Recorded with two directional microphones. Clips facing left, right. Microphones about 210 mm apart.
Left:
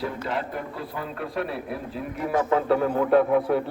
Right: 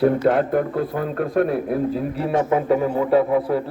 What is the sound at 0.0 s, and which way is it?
A man's voice, 55° right (ahead or behind).